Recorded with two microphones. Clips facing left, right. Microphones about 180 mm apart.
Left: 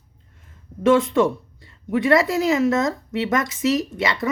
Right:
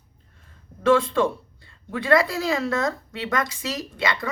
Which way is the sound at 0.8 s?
20° left (ahead or behind).